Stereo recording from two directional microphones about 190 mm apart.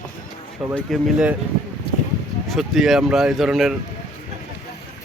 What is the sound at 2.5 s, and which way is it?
Speech, centre (ahead or behind).